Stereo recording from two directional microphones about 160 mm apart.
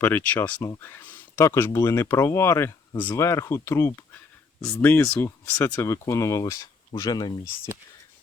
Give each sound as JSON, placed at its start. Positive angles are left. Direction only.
{"t": 0.0, "sound": "speech", "side_deg": 10}